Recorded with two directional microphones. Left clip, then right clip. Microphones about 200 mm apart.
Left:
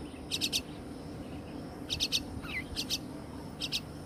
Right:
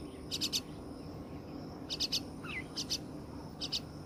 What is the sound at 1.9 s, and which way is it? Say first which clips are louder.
Bird: left 4 dB; centre (ahead or behind).